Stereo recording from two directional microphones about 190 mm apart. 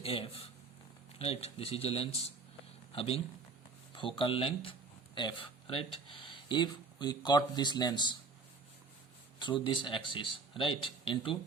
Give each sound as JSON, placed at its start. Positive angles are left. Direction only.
{"t": 0.0, "sound": "speech", "side_deg": 30}
{"t": 9.4, "sound": "speech", "side_deg": 25}